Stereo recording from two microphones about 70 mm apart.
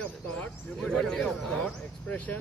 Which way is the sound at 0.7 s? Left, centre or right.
Centre.